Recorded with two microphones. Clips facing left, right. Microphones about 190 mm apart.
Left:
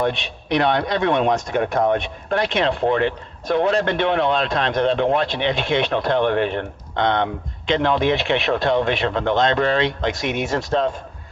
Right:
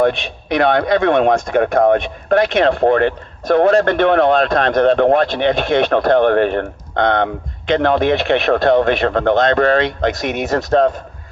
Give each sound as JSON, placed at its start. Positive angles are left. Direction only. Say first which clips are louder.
{"t": 0.0, "sound": "a man's voice", "louder": "right 7 dB", "side_deg": -55}